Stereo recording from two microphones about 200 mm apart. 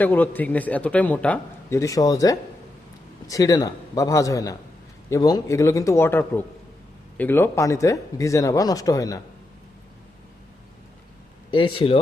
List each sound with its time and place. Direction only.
0.0 s a man's voice: 10° left (ahead or behind)
11.5 s speech: 25° left (ahead or behind)